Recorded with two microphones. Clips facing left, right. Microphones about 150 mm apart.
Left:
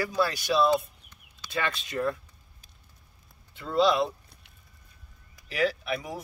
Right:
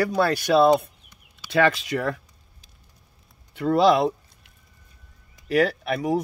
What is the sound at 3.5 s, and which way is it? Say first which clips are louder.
Speech: right 6 dB; 75° right (ahead or behind).